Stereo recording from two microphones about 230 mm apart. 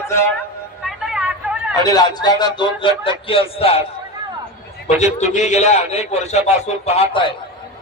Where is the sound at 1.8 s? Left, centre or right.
Centre.